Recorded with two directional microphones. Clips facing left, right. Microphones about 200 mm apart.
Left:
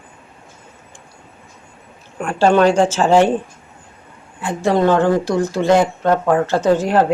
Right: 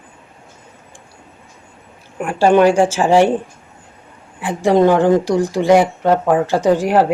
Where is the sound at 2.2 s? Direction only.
15° right (ahead or behind).